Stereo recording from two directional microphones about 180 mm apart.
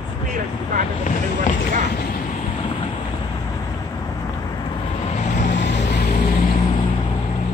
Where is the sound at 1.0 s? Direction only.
45° left (ahead or behind).